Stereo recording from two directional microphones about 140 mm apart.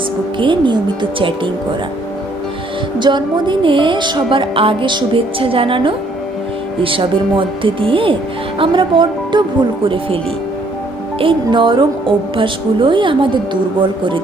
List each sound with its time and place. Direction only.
0.3 s a woman's voice: 35° right (ahead or behind)
3.0 s a woman's voice: 35° right (ahead or behind)
11.2 s a woman's voice: 35° right (ahead or behind)